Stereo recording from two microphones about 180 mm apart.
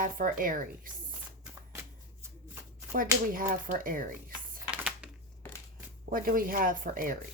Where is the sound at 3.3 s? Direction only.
50° right (ahead or behind).